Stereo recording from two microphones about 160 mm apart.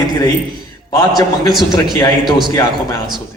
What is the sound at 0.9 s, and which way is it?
Speech, 25° left (ahead or behind).